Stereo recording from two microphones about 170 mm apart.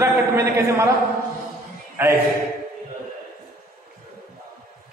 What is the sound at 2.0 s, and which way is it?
Speech, 15° right (ahead or behind).